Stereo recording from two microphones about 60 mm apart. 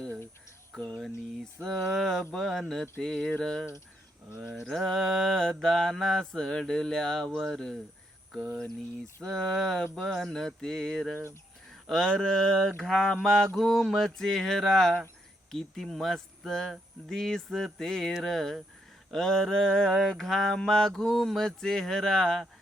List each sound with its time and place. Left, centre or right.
0.8 s mantra: centre
1.6 s speech: centre
3.3 s mantra: centre
4.4 s mantra: centre
4.7 s mantra: centre
7.3 s speech: centre
9.2 s mantra: centre
13.2 s speech: centre
13.6 s mantra: centre
15.5 s speech: centre
17.1 s mantra: centre
18.2 s speech: centre
19.1 s mantra: centre